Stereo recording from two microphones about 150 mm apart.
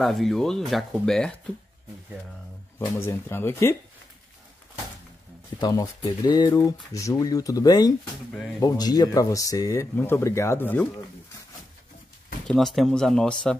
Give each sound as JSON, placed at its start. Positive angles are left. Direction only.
{"t": 0.0, "sound": "speech", "side_deg": 0}
{"t": 2.8, "sound": "speech", "side_deg": 20}
{"t": 5.6, "sound": "speech", "side_deg": 25}
{"t": 12.4, "sound": "speech", "side_deg": 0}